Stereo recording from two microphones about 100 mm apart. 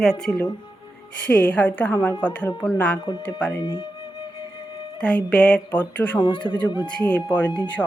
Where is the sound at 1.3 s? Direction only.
15° left (ahead or behind).